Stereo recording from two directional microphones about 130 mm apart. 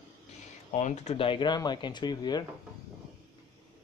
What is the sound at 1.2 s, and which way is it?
Speech, 40° left (ahead or behind).